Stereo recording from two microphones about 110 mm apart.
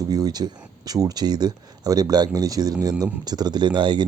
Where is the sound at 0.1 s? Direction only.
35° right (ahead or behind).